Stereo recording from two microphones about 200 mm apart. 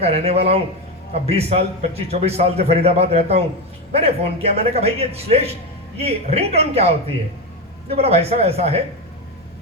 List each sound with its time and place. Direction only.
0.0 s a man's voice: 30° right (ahead or behind)